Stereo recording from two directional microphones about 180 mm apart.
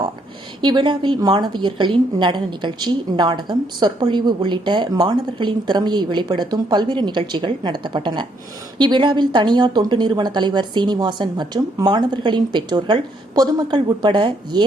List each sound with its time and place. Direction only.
0.6 s a woman's voice: 25° right (ahead or behind)